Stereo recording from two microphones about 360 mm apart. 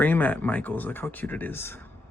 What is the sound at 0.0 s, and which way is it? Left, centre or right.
Speech, centre.